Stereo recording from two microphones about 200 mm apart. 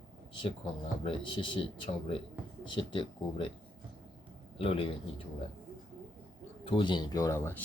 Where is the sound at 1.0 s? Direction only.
25° left (ahead or behind).